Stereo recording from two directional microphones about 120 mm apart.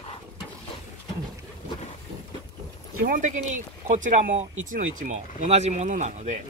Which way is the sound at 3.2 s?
85° right.